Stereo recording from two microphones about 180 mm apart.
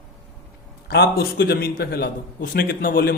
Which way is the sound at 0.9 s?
65° left (ahead or behind).